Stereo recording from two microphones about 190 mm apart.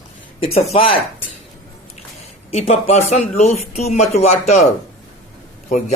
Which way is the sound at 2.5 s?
35° left (ahead or behind).